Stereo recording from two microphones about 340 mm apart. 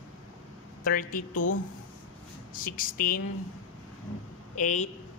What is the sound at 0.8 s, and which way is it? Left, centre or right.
Speech, left.